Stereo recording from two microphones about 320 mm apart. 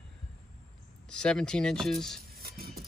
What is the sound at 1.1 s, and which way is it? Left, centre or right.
Speech, centre.